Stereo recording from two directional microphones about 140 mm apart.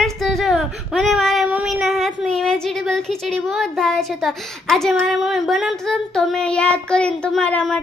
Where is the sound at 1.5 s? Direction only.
5° right (ahead or behind).